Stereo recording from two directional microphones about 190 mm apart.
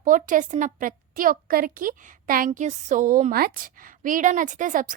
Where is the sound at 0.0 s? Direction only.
45° right (ahead or behind).